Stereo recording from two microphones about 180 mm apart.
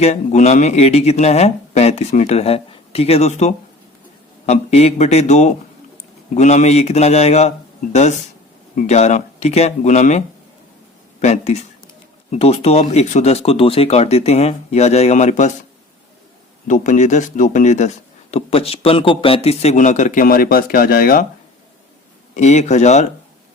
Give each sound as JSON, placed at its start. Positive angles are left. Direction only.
{"t": 0.0, "sound": "speech", "side_deg": 40}
{"t": 8.7, "sound": "speech", "side_deg": 40}
{"t": 16.6, "sound": "speech", "side_deg": 45}
{"t": 22.4, "sound": "speech", "side_deg": 40}